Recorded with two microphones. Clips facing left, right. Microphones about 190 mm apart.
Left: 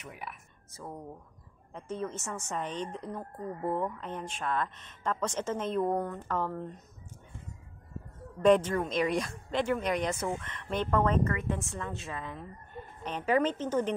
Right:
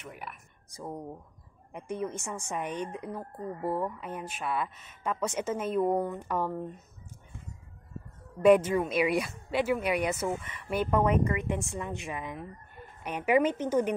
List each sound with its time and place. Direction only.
0.0 s speech: centre (ahead or behind)
0.7 s a woman's voice: 15° right (ahead or behind)
8.4 s a woman's voice: 10° right (ahead or behind)